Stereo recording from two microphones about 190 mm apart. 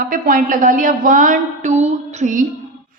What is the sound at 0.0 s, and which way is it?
A woman's voice, 45° right (ahead or behind).